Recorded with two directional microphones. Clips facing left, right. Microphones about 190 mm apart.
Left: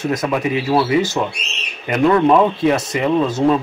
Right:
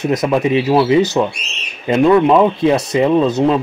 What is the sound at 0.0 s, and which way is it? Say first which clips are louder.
Speech: right 4 dB; 20° right (ahead or behind).